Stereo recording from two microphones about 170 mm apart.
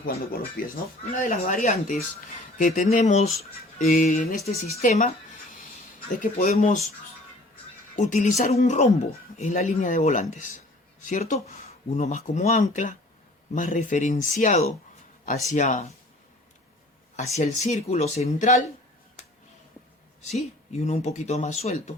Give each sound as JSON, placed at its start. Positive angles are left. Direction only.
{"t": 0.0, "sound": "speech", "side_deg": 60}
{"t": 1.2, "sound": "speech", "side_deg": 50}
{"t": 6.1, "sound": "speech", "side_deg": 45}
{"t": 7.9, "sound": "speech", "side_deg": 45}
{"t": 17.3, "sound": "speech", "side_deg": 40}
{"t": 20.2, "sound": "speech", "side_deg": 40}